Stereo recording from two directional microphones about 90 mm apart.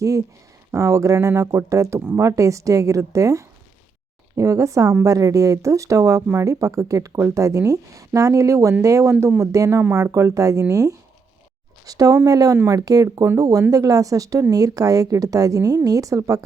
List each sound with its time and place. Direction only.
0.0 s speech: 40° right (ahead or behind)